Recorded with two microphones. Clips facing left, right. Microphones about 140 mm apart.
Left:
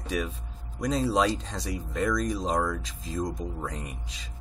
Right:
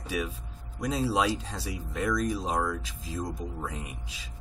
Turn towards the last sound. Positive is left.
turn(degrees=-5)  # may be behind; listen again after turning